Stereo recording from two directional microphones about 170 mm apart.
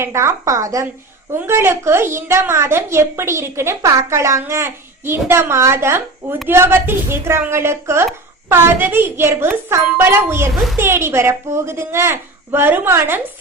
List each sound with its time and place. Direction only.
0.0 s a woman's voice: 15° right (ahead or behind)